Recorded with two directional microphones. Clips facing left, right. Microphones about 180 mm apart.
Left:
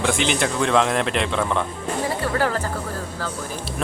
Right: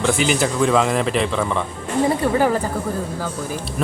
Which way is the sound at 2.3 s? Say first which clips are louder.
Right 4 dB; 15° right (ahead or behind).